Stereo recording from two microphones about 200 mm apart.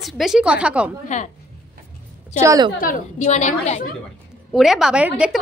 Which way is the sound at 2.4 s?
15° right (ahead or behind).